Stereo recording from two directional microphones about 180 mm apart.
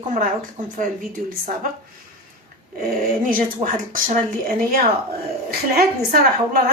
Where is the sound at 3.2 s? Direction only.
50° right (ahead or behind).